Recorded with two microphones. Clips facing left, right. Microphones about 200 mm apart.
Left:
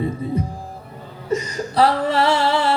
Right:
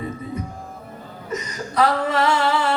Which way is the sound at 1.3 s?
30° left (ahead or behind).